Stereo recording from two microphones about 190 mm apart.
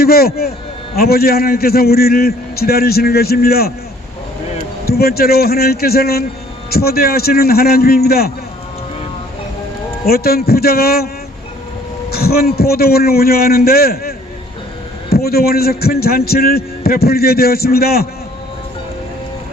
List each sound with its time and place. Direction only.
0.0 s a man's voice: 55° left (ahead or behind)
4.9 s a man's voice: 55° left (ahead or behind)
10.1 s a man's voice: 55° left (ahead or behind)
12.1 s a man's voice: 55° left (ahead or behind)
15.1 s a man's voice: 55° left (ahead or behind)